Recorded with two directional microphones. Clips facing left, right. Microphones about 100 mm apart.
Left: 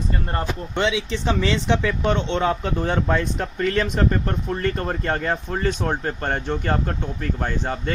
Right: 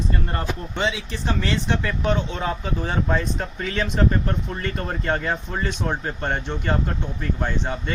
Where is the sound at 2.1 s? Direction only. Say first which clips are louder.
Left 3 dB; 75° left (ahead or behind).